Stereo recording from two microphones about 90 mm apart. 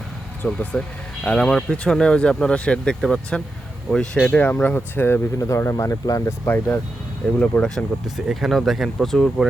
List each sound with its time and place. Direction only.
0.4 s speech: 10° left (ahead or behind)
5.4 s speech: 35° left (ahead or behind)
7.3 s speech: 10° left (ahead or behind)
8.0 s speech: 5° right (ahead or behind)